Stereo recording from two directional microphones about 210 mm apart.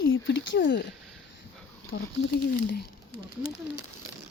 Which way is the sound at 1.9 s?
70° left (ahead or behind).